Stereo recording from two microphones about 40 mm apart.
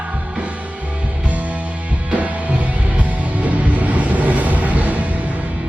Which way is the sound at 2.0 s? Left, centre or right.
Right.